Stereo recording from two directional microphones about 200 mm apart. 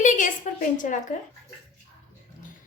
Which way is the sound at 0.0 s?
40° left (ahead or behind).